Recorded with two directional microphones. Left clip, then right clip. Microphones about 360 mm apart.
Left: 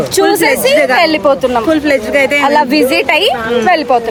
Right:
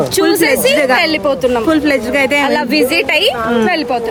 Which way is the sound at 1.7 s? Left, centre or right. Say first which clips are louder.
Left 2 dB; centre.